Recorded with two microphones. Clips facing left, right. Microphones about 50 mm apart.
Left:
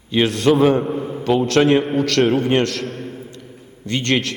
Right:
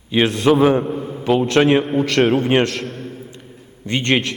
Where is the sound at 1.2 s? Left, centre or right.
Centre.